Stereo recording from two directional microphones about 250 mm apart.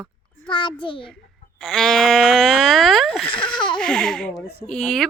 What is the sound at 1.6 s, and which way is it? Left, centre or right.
Speech, centre.